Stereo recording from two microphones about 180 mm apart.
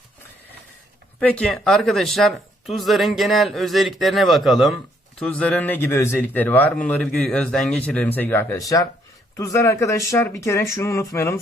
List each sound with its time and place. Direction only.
1.2 s speech: 5° left (ahead or behind)